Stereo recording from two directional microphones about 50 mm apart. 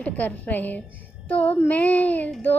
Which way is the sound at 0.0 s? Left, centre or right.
Left.